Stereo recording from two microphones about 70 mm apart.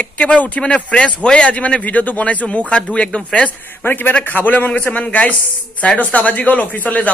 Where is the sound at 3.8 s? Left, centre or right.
Left.